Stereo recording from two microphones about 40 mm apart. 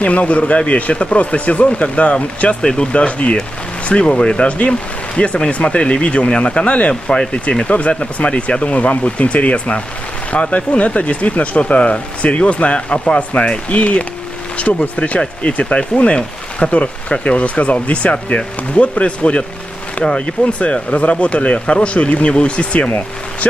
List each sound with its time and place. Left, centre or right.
0.0 s speech: left
20.1 s speech: centre
20.5 s speech: left